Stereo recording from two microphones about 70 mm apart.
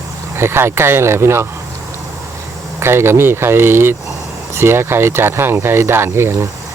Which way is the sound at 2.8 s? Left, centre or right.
Right.